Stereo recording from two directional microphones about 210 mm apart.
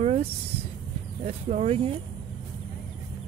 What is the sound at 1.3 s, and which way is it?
Speech, 30° right (ahead or behind).